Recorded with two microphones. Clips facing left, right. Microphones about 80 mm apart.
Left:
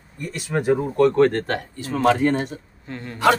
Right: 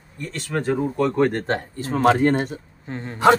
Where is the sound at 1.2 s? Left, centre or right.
Centre.